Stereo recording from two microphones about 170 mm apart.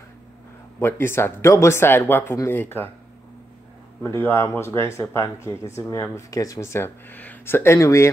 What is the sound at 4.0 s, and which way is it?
Speech, 15° left (ahead or behind).